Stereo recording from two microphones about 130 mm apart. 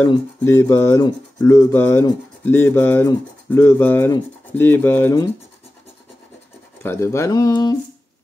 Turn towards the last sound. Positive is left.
turn(degrees=30)  # may be behind; listen again after turning